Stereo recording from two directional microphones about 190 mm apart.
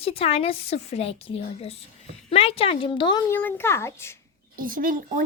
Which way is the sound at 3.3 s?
10° left (ahead or behind).